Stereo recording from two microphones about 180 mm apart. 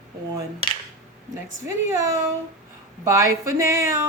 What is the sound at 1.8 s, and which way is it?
Speech, 15° right (ahead or behind).